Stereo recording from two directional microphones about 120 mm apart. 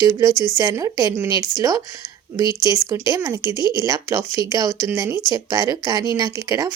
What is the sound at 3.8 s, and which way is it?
Speech, 25° right (ahead or behind).